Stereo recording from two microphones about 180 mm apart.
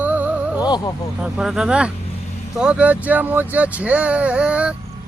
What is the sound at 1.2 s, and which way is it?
Speech, 5° right (ahead or behind).